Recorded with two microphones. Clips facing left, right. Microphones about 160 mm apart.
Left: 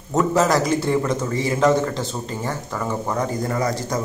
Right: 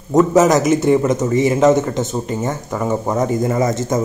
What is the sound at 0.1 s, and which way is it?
A man's voice, 20° right (ahead or behind).